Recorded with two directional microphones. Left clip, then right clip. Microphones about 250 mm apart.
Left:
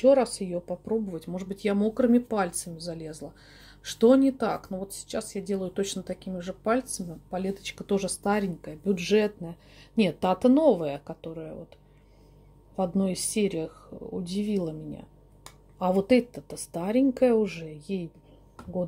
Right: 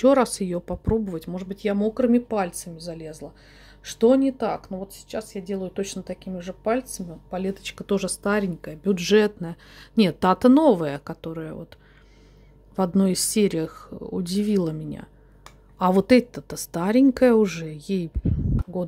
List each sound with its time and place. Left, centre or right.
0.0 s speech: right
12.7 s speech: right